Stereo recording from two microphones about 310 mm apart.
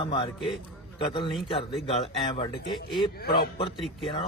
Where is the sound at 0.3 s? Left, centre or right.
Centre.